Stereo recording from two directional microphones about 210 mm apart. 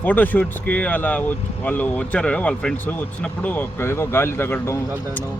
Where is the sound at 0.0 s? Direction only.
10° left (ahead or behind).